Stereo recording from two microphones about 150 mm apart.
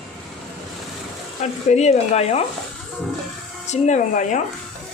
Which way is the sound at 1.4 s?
50° left (ahead or behind).